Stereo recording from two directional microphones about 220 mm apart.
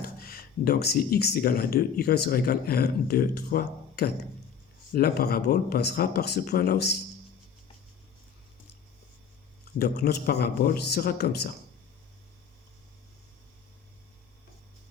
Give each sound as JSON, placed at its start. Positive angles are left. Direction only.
{"t": 0.0, "sound": "speech", "side_deg": 45}
{"t": 9.7, "sound": "speech", "side_deg": 45}